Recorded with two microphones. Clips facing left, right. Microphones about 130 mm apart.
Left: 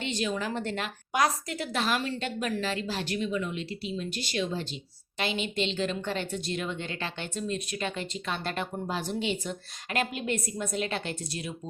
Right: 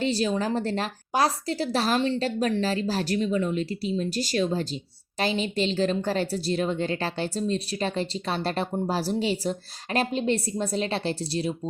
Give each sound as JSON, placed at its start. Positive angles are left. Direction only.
{"t": 0.0, "sound": "a woman's voice", "side_deg": -35}